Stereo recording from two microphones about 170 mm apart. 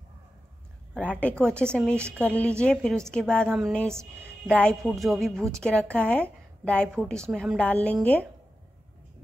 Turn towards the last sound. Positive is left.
turn(degrees=10)  # may be behind; listen again after turning